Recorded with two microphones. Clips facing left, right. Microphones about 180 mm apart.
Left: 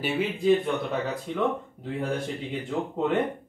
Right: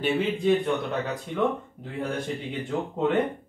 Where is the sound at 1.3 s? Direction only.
Centre (ahead or behind).